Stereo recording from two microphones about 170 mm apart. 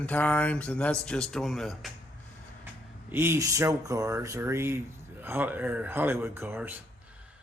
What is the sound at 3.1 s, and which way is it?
Speech, 15° right (ahead or behind).